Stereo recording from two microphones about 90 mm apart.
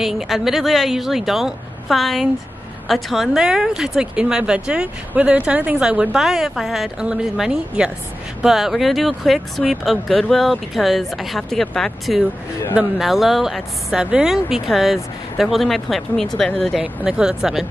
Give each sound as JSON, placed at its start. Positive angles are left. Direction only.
{"t": 0.0, "sound": "speech", "side_deg": 0}
{"t": 16.8, "sound": "speech", "side_deg": -10}